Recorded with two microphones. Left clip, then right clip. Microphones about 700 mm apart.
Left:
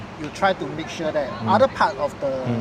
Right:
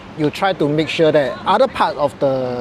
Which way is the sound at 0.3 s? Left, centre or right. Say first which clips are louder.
Right 3 dB; right.